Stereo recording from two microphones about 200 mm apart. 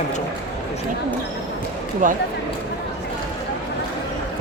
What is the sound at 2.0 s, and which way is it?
Speech, 40° right (ahead or behind).